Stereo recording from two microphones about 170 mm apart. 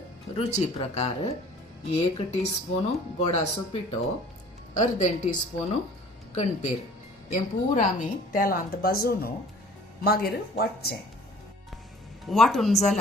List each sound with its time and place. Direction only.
0.3 s speech: 35° left (ahead or behind)
6.3 s a woman's voice: 45° left (ahead or behind); by 10.9 s 65° left (ahead or behind)
12.2 s speech: centre (ahead or behind)